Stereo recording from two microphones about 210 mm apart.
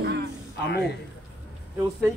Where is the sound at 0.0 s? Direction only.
50° right (ahead or behind).